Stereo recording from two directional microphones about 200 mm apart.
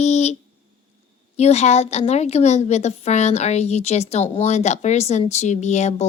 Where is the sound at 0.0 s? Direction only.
35° left (ahead or behind).